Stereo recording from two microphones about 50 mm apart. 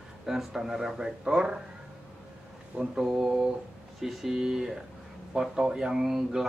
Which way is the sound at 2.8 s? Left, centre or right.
Centre.